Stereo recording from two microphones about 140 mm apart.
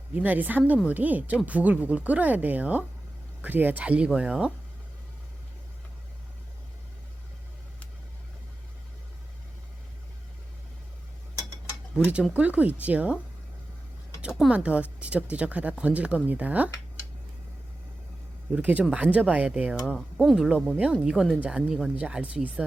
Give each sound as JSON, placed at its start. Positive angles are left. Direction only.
{"t": 0.1, "sound": "speech", "side_deg": -10}
{"t": 11.9, "sound": "speech", "side_deg": -5}
{"t": 14.2, "sound": "speech", "side_deg": -5}
{"t": 18.5, "sound": "speech", "side_deg": -10}